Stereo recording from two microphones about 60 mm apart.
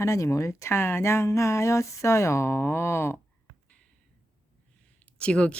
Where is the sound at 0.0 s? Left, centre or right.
Left.